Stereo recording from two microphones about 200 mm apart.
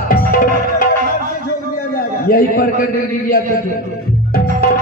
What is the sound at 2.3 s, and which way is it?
Speech, 45° left (ahead or behind).